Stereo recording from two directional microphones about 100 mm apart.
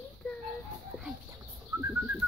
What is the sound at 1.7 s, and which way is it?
Bird, 30° right (ahead or behind).